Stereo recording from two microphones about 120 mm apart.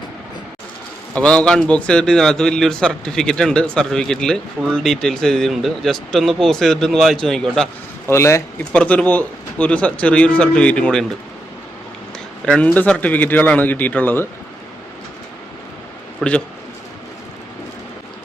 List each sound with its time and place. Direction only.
1.1 s a man's voice: 10° left (ahead or behind)
8.0 s speech: 20° left (ahead or behind)
8.7 s speech: 10° left (ahead or behind)
12.5 s speech: 10° left (ahead or behind)
16.2 s a man's voice: 5° left (ahead or behind)